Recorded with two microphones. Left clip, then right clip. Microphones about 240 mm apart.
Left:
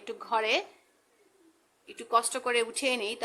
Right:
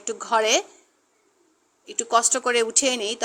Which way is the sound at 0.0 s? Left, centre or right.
Centre.